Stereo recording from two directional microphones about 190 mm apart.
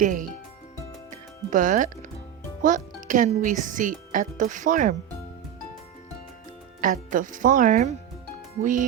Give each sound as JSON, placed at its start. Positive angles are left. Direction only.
{"t": 0.0, "sound": "speech", "side_deg": -45}
{"t": 1.5, "sound": "speech", "side_deg": -45}
{"t": 6.8, "sound": "speech", "side_deg": -45}